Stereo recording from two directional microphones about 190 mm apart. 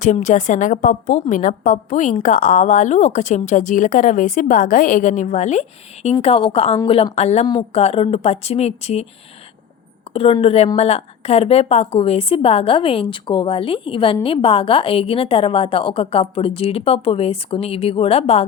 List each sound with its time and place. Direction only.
0.0 s speech: 40° left (ahead or behind)
10.2 s a woman's voice: 30° left (ahead or behind)